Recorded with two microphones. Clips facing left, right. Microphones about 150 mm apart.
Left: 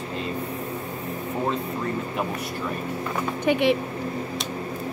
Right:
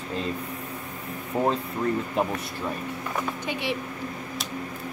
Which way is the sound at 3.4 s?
55° left (ahead or behind).